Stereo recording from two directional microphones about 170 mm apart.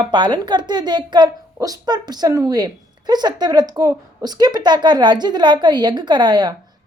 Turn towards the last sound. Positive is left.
turn(degrees=-25)  # may be behind; listen again after turning